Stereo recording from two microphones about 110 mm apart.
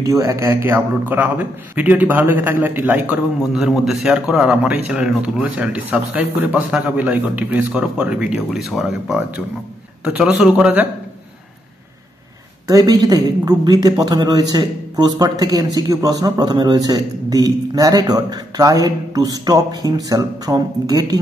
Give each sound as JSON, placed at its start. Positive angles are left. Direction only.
{"t": 0.0, "sound": "a man's voice", "side_deg": -30}
{"t": 12.6, "sound": "a man's voice", "side_deg": -35}